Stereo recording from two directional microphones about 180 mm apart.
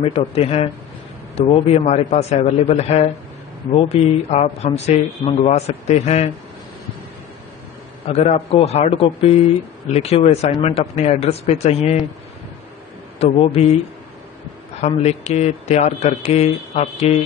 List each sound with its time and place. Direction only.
0.0 s speech: 35° left (ahead or behind)
8.1 s speech: 35° left (ahead or behind)
13.2 s speech: 35° left (ahead or behind)
14.8 s speech: 40° left (ahead or behind)